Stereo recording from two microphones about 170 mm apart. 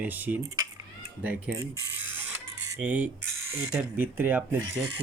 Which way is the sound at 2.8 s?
10° right (ahead or behind).